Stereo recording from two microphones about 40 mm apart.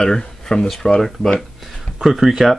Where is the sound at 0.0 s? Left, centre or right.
Centre.